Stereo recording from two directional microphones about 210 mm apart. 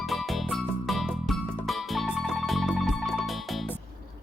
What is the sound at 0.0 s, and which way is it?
Music, centre (ahead or behind).